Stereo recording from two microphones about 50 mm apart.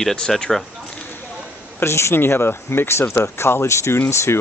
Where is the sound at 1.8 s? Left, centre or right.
Left.